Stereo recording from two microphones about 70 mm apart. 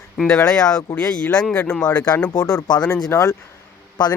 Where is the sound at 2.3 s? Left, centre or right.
Left.